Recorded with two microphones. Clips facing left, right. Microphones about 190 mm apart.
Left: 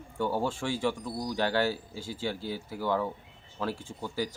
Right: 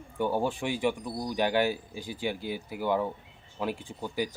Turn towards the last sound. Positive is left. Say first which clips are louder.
# right 1 dB
turn(degrees=-15)  # may be behind; listen again after turning